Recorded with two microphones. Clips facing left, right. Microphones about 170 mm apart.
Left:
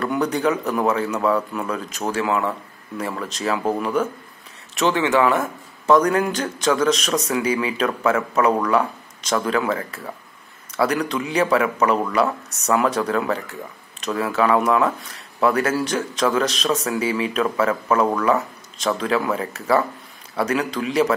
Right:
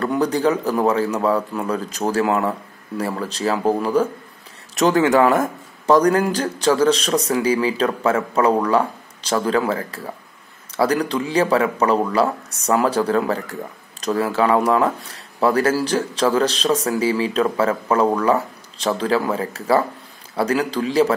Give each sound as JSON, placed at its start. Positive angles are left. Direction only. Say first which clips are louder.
{"t": 0.0, "sound": "speech", "louder": "right 2 dB", "side_deg": -30}